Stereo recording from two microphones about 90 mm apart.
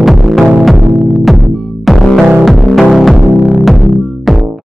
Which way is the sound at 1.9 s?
Centre (ahead or behind).